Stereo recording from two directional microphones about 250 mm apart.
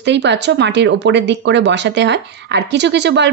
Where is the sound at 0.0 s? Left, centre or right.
Right.